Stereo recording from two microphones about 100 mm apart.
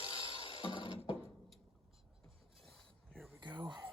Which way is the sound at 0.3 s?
60° left (ahead or behind).